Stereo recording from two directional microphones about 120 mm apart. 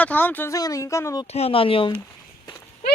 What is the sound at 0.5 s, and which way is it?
Speech, 30° left (ahead or behind).